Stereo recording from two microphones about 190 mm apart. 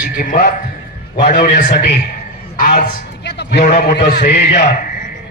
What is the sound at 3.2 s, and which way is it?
A man's voice, 60° left (ahead or behind).